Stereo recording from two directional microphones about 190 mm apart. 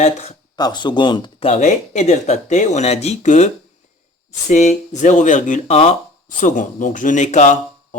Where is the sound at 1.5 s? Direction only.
35° left (ahead or behind).